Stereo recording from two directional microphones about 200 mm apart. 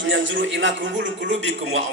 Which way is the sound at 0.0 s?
65° right (ahead or behind).